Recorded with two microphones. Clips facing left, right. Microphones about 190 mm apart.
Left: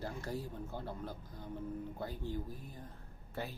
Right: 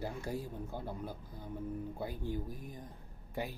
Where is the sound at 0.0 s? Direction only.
10° right (ahead or behind).